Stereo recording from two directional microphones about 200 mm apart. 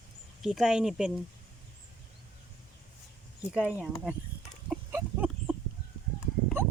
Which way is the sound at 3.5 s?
5° right (ahead or behind).